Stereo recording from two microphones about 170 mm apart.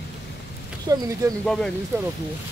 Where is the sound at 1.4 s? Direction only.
5° left (ahead or behind).